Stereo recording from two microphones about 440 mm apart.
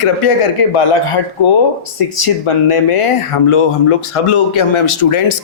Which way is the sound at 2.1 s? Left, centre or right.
Left.